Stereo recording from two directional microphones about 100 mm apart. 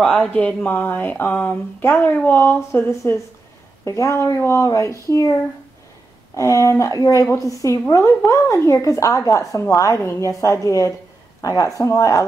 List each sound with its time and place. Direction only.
0.0 s a woman's voice: 10° left (ahead or behind); by 5.3 s 30° left (ahead or behind)
6.3 s a woman's voice: 30° left (ahead or behind)